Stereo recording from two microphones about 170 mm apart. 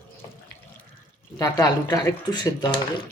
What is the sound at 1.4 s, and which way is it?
Speech, 20° left (ahead or behind).